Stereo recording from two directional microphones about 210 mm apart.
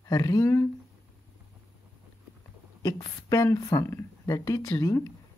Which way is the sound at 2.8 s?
15° left (ahead or behind).